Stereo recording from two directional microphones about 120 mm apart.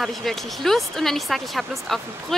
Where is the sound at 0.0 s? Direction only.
Centre (ahead or behind).